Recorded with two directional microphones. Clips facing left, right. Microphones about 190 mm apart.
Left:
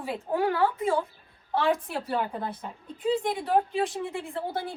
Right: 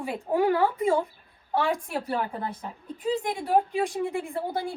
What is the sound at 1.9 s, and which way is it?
A woman's voice, 5° right (ahead or behind).